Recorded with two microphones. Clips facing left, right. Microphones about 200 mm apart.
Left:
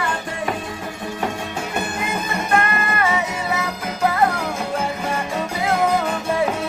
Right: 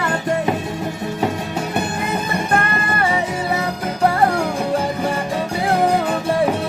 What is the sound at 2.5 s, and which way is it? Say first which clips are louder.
Music: left 2 dB; 35° right (ahead or behind).